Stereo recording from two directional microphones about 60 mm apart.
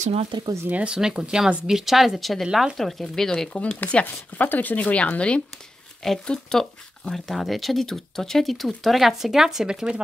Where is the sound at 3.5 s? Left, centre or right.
Centre.